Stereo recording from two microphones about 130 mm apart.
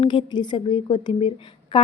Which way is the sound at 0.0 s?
35° left (ahead or behind).